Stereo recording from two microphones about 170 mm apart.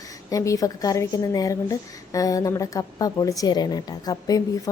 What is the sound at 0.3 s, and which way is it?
A woman's voice, 20° left (ahead or behind).